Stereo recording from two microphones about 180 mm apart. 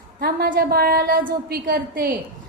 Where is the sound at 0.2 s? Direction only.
60° right (ahead or behind).